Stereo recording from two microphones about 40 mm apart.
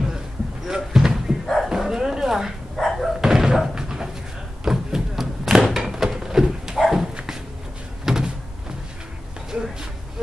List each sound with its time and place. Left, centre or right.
0.7 s a sound: centre
1.4 s dog: centre
1.7 s bow-wow: centre
2.9 s a sound: centre
3.2 s slam: centre
4.6 s thump: centre
6.1 s horse: centre
8.0 s door: centre
9.5 s a sound: right